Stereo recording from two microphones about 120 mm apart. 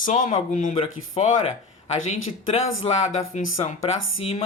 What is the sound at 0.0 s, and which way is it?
Speech, 90° left.